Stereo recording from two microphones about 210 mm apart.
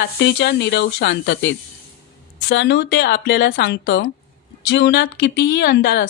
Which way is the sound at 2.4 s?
55° left (ahead or behind).